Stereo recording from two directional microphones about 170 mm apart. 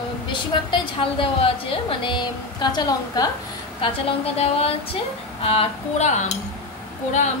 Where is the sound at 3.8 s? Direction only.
35° left (ahead or behind).